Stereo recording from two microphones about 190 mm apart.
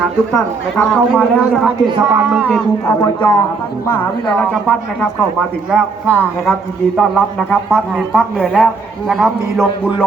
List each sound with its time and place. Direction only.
0.3 s a man's voice: 10° left (ahead or behind)
2.0 s a man's voice: 10° right (ahead or behind)
2.8 s a man's voice: 20° left (ahead or behind); by 9.9 s centre (ahead or behind)